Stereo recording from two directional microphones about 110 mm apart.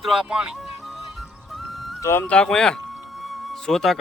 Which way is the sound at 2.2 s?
10° left (ahead or behind).